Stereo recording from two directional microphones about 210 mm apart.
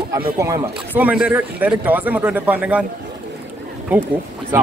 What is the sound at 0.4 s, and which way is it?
Speech, 15° right (ahead or behind).